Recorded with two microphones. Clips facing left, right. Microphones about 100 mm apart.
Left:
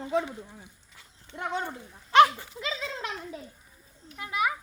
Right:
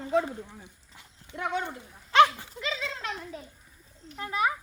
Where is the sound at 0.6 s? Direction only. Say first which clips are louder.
Right 1 dB; 20° right (ahead or behind).